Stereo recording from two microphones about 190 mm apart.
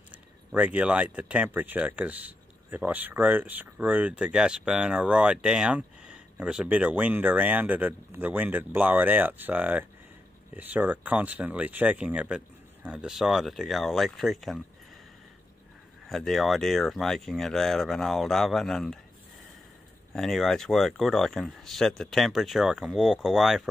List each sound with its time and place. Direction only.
0.1 s speech: 5° right (ahead or behind)
16.1 s speech: centre (ahead or behind)
20.1 s speech: centre (ahead or behind)